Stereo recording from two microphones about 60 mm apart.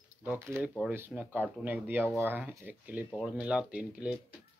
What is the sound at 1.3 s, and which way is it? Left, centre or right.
Speech, right.